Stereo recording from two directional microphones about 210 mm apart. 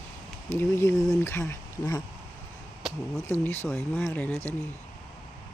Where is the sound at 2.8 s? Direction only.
Centre (ahead or behind).